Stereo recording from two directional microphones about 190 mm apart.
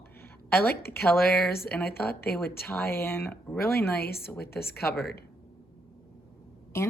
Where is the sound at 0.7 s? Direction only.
55° left (ahead or behind).